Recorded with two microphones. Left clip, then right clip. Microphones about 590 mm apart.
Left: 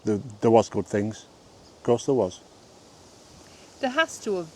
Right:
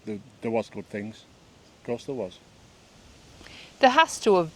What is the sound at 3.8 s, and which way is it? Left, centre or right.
Speech, right.